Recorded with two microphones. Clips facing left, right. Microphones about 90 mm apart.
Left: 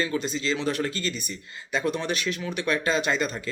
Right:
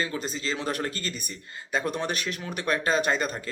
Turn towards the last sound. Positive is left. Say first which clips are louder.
# even
turn(degrees=-40)  # may be behind; listen again after turning